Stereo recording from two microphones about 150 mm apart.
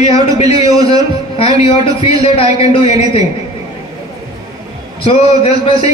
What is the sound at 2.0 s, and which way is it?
A man's voice, 40° left (ahead or behind).